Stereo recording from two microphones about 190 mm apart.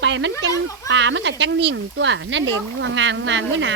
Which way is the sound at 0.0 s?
75° right (ahead or behind).